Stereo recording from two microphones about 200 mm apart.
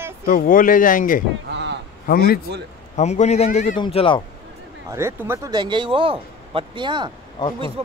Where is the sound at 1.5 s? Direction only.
60° right (ahead or behind).